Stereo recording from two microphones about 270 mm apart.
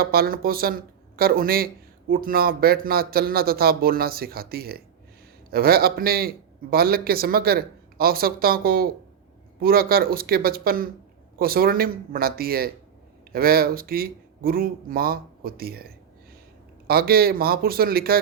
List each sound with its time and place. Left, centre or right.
0.0 s speech: right